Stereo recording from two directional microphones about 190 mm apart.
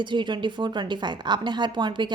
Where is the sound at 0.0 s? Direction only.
25° right (ahead or behind).